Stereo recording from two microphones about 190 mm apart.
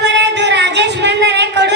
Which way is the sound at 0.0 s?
65° right (ahead or behind).